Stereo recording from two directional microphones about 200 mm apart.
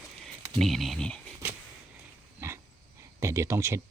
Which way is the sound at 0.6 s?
Centre (ahead or behind).